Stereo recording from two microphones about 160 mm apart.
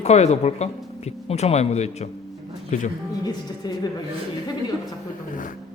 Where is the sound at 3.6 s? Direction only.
25° left (ahead or behind).